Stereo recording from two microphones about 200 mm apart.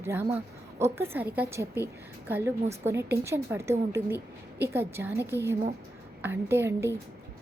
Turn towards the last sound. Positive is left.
turn(degrees=-10)  # may be behind; listen again after turning